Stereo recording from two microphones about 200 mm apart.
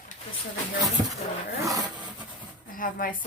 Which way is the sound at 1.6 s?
15° right (ahead or behind).